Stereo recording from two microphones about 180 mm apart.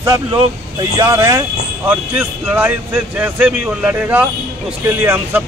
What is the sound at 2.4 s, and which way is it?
Speech, 10° right (ahead or behind).